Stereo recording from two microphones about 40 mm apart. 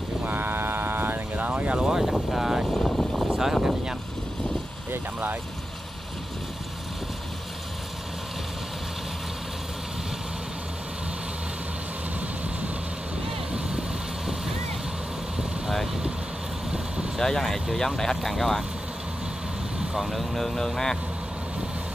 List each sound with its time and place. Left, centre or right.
0.2 s vehicle: right
1.9 s vehicle: centre
2.3 s speech: centre
2.7 s vehicle: centre
3.3 s vehicle: centre
13.5 s vehicle: right
17.2 s speech: centre
20.0 s speech: centre